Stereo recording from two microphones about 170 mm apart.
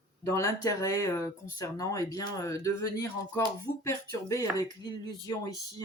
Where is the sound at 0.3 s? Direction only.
20° left (ahead or behind).